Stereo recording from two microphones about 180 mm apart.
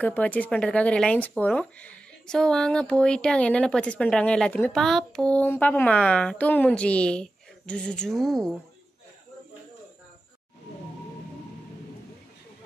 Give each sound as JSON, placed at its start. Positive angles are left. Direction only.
{"t": 0.0, "sound": "speech", "side_deg": 10}